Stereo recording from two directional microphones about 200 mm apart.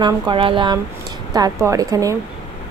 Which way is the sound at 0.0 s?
25° right (ahead or behind).